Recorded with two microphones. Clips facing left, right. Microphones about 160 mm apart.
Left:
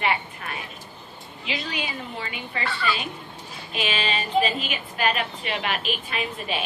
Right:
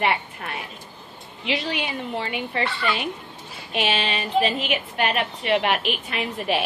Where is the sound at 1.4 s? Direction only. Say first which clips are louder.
Right 5 dB; 65° right (ahead or behind).